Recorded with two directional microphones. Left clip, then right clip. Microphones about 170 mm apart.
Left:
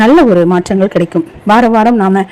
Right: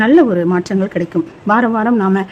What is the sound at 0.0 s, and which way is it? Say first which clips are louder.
A woman's voice: left 5 dB; 25° left (ahead or behind).